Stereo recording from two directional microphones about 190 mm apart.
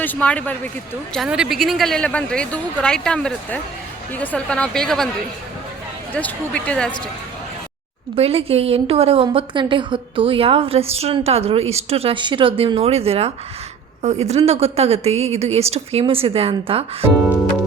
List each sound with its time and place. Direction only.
0.0 s a man's voice: 10° left (ahead or behind)
6.1 s speech: 5° left (ahead or behind)
8.1 s a woman's voice: 30° right (ahead or behind)